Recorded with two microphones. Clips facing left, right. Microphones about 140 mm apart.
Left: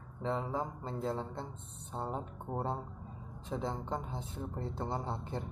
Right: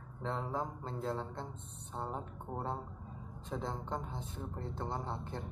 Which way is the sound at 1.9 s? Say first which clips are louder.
Left 2 dB; 15° left (ahead or behind).